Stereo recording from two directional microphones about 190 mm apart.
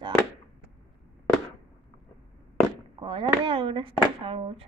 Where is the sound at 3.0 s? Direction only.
25° right (ahead or behind).